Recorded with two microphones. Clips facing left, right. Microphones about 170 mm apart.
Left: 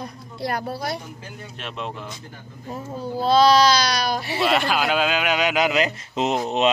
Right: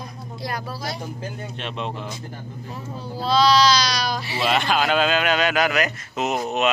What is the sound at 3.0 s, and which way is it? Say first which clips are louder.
Speech: left 3 dB; 50° left (ahead or behind).